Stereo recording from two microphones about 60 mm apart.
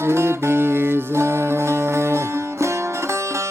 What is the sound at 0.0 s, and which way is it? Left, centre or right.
Music, right.